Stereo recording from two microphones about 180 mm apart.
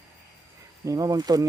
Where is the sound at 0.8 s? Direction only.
20° right (ahead or behind).